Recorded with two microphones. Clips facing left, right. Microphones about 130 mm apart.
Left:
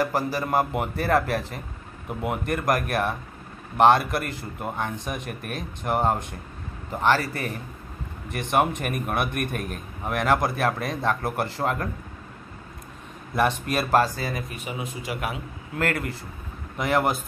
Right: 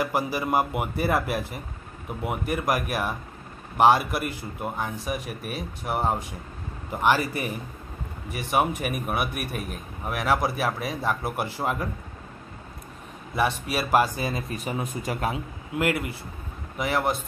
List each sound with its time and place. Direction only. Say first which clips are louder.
0.0 s a man's voice: left 1 dB; 10° right (ahead or behind)
13.4 s speech: left 2 dB; 5° right (ahead or behind); by 14.4 s 20° right (ahead or behind)
14.5 s speech: right 3 dB; 40° right (ahead or behind)
15.1 s a man's voice: right 3 dB; 30° right (ahead or behind)
15.7 s a man's voice: right 1 dB; 10° right (ahead or behind)